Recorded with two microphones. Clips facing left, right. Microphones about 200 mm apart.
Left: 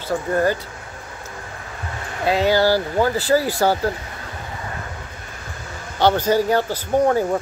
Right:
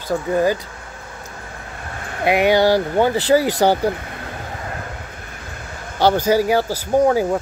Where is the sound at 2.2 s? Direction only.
20° right (ahead or behind).